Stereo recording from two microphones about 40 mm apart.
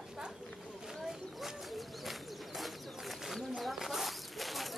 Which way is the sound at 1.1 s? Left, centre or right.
Centre.